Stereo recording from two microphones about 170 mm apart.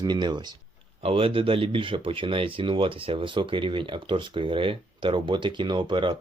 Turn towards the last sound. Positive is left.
turn(degrees=-30)  # may be behind; listen again after turning